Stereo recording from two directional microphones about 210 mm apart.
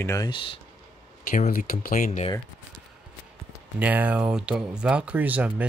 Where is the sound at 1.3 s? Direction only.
35° left (ahead or behind).